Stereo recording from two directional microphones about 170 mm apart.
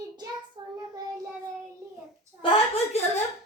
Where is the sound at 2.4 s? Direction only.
30° left (ahead or behind).